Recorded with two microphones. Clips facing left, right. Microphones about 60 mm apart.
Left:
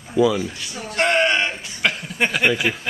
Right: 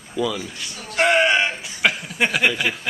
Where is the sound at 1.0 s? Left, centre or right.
Centre.